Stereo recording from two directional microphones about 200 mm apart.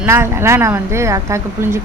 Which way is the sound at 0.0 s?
10° right (ahead or behind).